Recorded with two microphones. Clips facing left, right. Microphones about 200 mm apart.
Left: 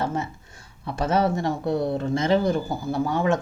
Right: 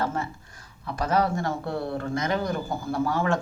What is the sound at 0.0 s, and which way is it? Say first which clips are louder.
Speech: left 1 dB; 20° left (ahead or behind).